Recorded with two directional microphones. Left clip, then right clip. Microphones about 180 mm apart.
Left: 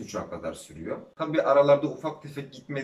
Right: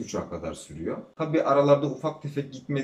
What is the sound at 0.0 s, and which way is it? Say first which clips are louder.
Speech: right 1 dB; 15° right (ahead or behind).